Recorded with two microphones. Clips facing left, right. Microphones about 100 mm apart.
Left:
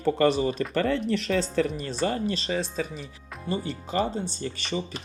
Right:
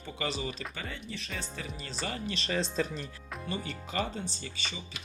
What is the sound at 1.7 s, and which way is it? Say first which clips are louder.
Speech: left 10 dB; 45° left (ahead or behind).